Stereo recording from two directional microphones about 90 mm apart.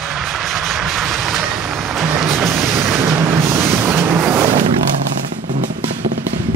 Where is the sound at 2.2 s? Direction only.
Centre (ahead or behind).